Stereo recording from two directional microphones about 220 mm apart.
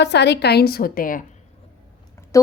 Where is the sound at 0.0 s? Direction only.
50° left (ahead or behind).